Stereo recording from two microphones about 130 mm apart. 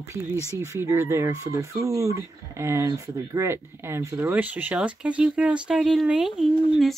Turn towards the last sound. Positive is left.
turn(degrees=0)  # may be behind; listen again after turning